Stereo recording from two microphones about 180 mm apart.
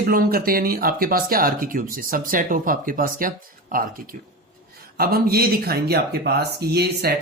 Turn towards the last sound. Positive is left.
turn(degrees=-60)  # may be behind; listen again after turning